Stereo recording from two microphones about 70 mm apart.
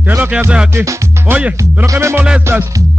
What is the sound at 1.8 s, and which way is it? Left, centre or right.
Music, right.